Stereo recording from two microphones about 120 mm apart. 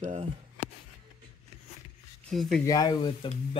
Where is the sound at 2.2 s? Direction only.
5° left (ahead or behind).